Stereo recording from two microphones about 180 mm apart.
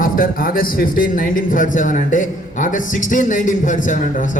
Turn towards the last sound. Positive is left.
turn(degrees=45)  # may be behind; listen again after turning